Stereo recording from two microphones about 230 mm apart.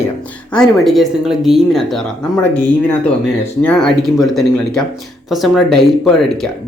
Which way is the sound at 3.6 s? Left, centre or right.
Centre.